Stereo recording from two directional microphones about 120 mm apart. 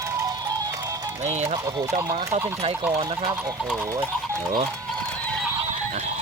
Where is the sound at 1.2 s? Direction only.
65° right (ahead or behind).